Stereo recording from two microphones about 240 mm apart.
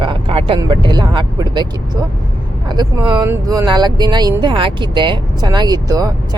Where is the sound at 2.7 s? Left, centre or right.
Centre.